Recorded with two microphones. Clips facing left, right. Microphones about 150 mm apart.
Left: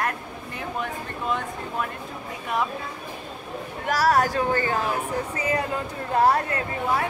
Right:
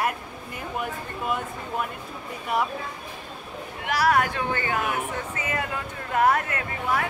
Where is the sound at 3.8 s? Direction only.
40° left (ahead or behind).